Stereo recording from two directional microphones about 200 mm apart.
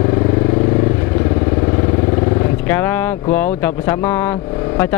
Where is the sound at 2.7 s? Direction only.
10° left (ahead or behind).